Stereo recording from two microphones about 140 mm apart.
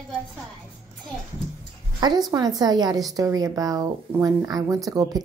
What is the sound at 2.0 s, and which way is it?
A woman's voice, 30° right (ahead or behind).